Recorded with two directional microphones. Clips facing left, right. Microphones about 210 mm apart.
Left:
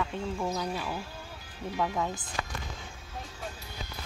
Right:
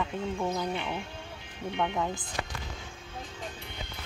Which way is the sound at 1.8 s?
5° left (ahead or behind).